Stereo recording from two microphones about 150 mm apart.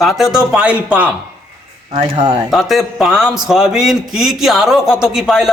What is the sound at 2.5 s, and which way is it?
A man's voice, centre (ahead or behind).